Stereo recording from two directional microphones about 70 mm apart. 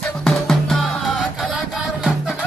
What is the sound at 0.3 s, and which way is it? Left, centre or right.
Music, centre.